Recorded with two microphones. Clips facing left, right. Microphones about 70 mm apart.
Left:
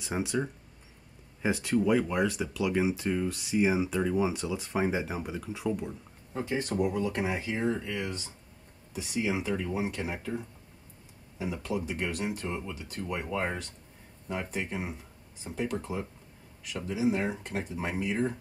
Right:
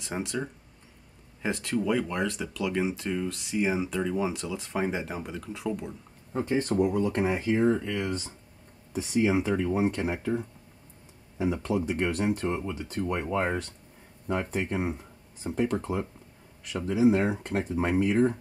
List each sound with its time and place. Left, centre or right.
0.0 s speech: centre
6.3 s speech: right
11.3 s speech: right